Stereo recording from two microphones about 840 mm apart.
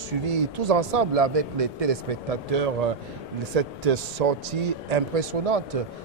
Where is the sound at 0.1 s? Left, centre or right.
Right.